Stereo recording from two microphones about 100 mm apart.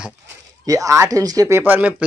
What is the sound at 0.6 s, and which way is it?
Speech, 35° right (ahead or behind).